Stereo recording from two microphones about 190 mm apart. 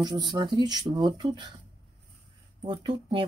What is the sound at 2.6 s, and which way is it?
Speech, 25° right (ahead or behind).